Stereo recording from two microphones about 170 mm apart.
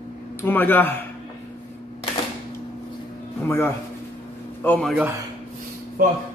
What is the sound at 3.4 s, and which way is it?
Speech, 15° left (ahead or behind).